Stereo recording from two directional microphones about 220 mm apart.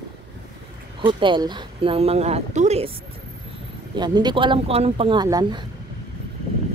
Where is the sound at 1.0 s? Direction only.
20° right (ahead or behind).